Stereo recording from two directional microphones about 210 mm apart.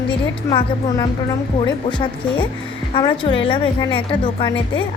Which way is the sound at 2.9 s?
25° left (ahead or behind).